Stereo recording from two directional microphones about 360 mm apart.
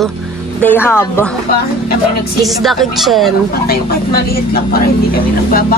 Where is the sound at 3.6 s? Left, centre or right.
Left.